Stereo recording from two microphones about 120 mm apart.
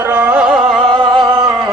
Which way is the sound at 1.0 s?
40° right (ahead or behind).